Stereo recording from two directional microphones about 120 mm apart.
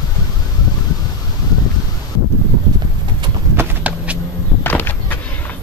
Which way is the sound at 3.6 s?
10° right (ahead or behind).